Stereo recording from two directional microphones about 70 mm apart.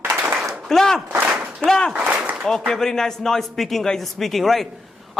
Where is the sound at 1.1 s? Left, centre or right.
Centre.